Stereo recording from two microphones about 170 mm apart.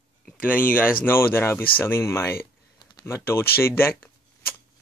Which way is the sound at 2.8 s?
20° left (ahead or behind).